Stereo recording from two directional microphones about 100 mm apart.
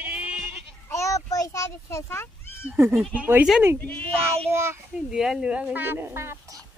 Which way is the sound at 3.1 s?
15° right (ahead or behind).